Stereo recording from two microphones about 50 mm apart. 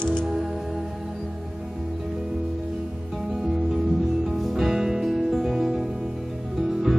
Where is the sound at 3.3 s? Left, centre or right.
Centre.